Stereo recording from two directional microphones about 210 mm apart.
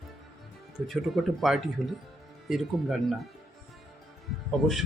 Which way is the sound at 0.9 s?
Centre (ahead or behind).